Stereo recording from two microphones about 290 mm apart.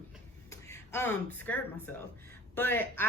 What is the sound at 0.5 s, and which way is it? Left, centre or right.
A woman's voice, centre.